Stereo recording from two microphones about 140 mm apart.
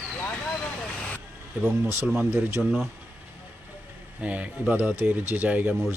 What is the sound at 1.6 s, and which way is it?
Speech, 15° right (ahead or behind).